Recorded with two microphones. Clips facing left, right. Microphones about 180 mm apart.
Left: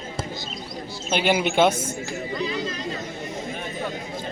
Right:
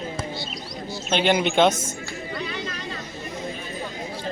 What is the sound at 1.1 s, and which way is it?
Speech, 5° left (ahead or behind).